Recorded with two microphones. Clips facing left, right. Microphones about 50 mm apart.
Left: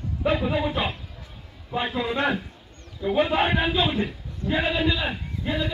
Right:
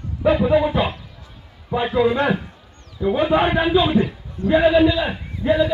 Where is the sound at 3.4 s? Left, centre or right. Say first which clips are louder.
Right 4 dB; centre.